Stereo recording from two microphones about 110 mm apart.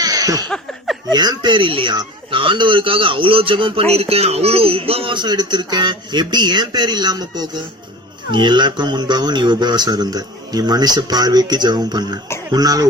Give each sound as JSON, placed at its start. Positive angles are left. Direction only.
{"t": 0.0, "sound": "laughter", "side_deg": -35}
{"t": 0.4, "sound": "a sound", "side_deg": 5}
{"t": 1.1, "sound": "speech", "side_deg": -40}
{"t": 3.9, "sound": "speech", "side_deg": -65}